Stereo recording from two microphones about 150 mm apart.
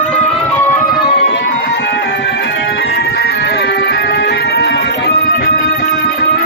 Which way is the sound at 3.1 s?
90° left.